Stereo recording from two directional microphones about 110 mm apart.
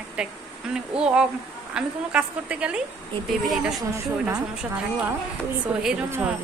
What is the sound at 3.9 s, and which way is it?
Speech, 30° right (ahead or behind).